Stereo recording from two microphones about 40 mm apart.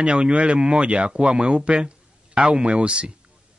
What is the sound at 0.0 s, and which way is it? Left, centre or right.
A man's voice, right.